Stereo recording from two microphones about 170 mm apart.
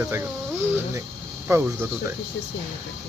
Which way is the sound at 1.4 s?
15° right (ahead or behind).